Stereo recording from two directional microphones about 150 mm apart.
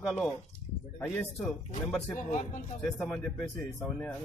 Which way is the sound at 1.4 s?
Centre (ahead or behind).